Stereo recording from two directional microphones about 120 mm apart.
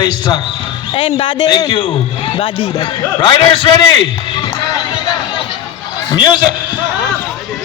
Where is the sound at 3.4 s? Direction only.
50° left (ahead or behind).